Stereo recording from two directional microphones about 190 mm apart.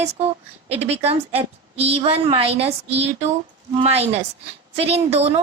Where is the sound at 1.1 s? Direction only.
30° right (ahead or behind).